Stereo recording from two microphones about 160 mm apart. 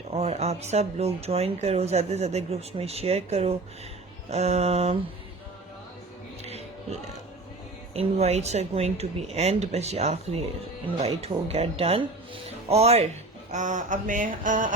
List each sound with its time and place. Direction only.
0.1 s speech: 40° right (ahead or behind)
7.9 s speech: 40° right (ahead or behind)
11.4 s speech: 40° right (ahead or behind); by 14.7 s 55° right (ahead or behind)